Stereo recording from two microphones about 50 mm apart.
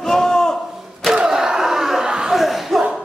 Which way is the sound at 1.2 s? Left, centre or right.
Centre.